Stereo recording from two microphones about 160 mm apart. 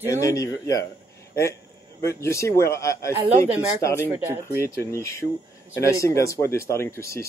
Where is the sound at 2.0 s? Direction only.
15° left (ahead or behind).